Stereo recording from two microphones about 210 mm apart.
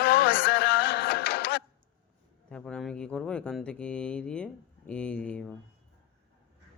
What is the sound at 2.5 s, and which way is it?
Speech, 5° left (ahead or behind).